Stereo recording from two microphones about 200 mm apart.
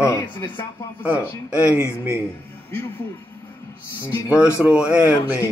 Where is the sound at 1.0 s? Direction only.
5° right (ahead or behind).